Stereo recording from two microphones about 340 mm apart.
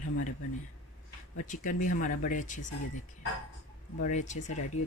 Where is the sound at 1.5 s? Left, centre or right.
Left.